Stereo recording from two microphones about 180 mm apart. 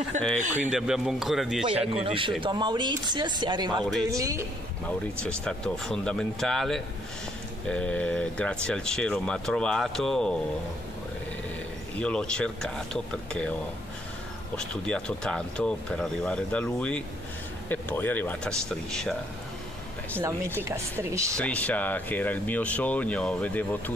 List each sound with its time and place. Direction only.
0.4 s speech: 40° right (ahead or behind)
0.7 s speech: 5° right (ahead or behind)
2.0 s speech: 30° right (ahead or behind)
4.8 s speech: 5° left (ahead or behind)
12.0 s speech: 5° left (ahead or behind)
14.6 s speech: 5° left (ahead or behind)
20.2 s speech: 15° right (ahead or behind)
21.4 s speech: 5° left (ahead or behind)